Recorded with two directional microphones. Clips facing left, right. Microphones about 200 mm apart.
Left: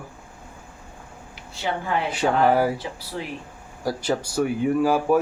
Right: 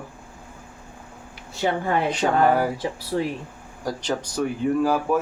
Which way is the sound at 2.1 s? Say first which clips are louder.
Left 1 dB; 10° left (ahead or behind).